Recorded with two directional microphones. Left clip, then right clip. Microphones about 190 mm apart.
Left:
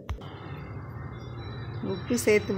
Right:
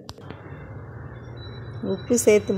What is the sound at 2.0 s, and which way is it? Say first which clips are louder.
Speech: right 6 dB; 20° right (ahead or behind).